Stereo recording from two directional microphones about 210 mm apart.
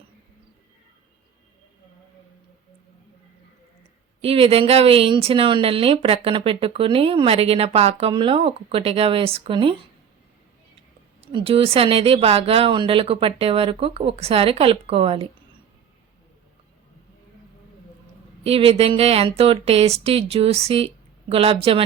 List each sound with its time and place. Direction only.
4.2 s speech: 30° right (ahead or behind)
11.2 s speech: 25° right (ahead or behind)
18.4 s speech: 30° right (ahead or behind)